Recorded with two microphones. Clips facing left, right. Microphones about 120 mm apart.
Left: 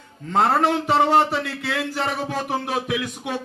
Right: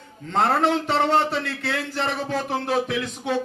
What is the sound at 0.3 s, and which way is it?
A man's voice, 5° left (ahead or behind).